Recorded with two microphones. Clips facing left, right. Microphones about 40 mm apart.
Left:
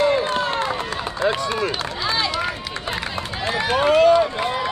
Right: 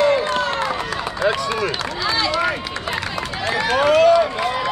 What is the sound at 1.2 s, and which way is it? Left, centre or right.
Speech, right.